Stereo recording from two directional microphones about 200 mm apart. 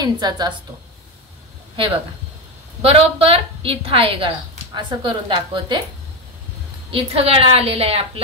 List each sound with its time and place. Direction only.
0.0 s a woman's voice: 20° right (ahead or behind)
2.8 s a woman's voice: 30° right (ahead or behind)
6.9 s a woman's voice: 30° right (ahead or behind)